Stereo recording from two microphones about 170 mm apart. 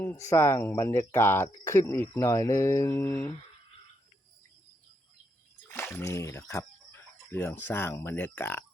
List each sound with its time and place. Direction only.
0.3 s speech: 15° left (ahead or behind)
5.6 s speech: 10° left (ahead or behind)